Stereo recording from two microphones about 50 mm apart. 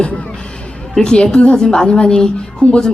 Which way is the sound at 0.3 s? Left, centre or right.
Centre.